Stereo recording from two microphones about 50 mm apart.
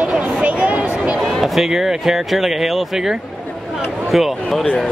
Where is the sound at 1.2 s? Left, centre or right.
Centre.